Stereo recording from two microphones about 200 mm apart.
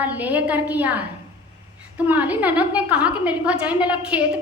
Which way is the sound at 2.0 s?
10° right (ahead or behind).